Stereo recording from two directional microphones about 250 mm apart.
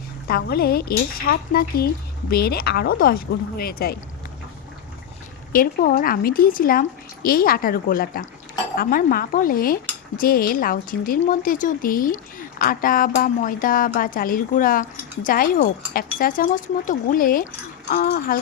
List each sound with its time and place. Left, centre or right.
0.3 s speech: left
5.5 s speech: left